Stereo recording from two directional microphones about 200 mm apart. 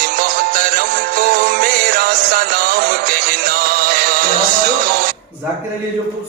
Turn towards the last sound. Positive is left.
turn(degrees=-45)  # may be behind; listen again after turning